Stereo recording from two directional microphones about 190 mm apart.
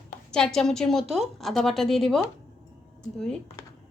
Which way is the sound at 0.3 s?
5° left (ahead or behind).